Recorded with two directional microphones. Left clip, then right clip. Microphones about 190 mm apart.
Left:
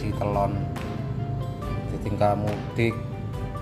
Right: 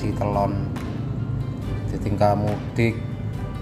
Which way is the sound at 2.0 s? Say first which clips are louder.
Right 3 dB; centre (ahead or behind).